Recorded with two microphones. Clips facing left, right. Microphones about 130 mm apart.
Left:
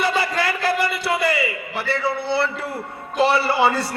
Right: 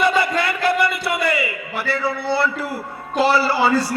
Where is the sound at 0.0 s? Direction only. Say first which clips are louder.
Right 3 dB; 30° left (ahead or behind).